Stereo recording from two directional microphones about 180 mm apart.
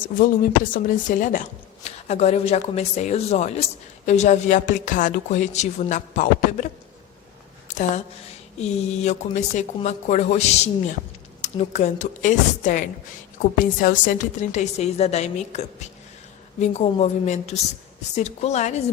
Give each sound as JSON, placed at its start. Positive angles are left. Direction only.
{"t": 0.7, "sound": "a woman's voice", "side_deg": 45}
{"t": 7.7, "sound": "a sound", "side_deg": 40}
{"t": 8.6, "sound": "a woman's voice", "side_deg": 40}